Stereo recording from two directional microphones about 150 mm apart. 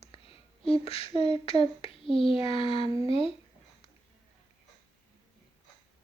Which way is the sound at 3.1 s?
40° left (ahead or behind).